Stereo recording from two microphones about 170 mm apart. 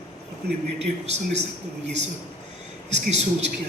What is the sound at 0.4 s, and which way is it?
Speech, 70° right (ahead or behind).